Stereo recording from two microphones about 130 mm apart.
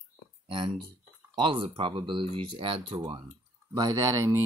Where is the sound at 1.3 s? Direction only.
40° right (ahead or behind).